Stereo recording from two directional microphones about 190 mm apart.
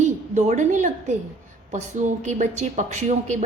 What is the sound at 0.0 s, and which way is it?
A woman's voice, 40° right (ahead or behind).